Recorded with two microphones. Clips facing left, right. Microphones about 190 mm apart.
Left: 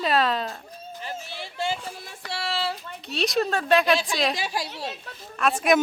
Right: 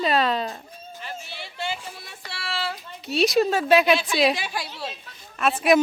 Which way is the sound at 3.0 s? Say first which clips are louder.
Right 5 dB; centre (ahead or behind).